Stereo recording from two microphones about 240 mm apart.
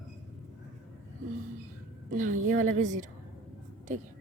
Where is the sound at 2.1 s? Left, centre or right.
Right.